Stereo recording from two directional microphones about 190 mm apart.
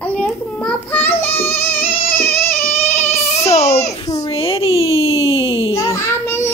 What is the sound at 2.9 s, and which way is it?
Child singing, 10° left (ahead or behind).